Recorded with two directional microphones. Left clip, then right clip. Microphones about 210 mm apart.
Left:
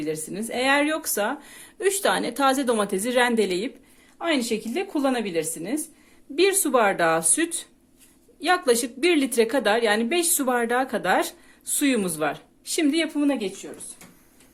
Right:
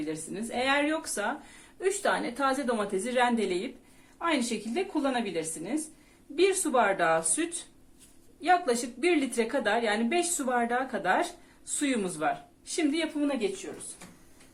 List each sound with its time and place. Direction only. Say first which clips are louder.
0.0 s a woman's voice: left 6 dB; 50° left (ahead or behind)